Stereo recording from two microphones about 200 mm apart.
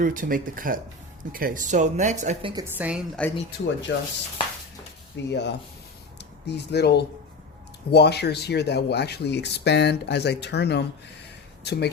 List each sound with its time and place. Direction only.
0.0 s speech: 45° right (ahead or behind)
2.7 s a woman's voice: 5° right (ahead or behind)
3.2 s speech: 5° left (ahead or behind)
3.9 s speech: 70° left (ahead or behind)
5.1 s speech: 60° left (ahead or behind)